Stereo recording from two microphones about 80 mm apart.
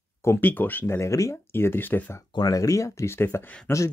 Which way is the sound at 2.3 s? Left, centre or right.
Left.